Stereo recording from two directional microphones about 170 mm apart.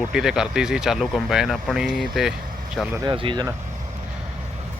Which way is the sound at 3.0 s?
30° right (ahead or behind).